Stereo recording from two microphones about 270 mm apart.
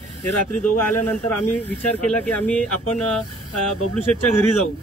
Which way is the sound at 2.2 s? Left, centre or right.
Centre.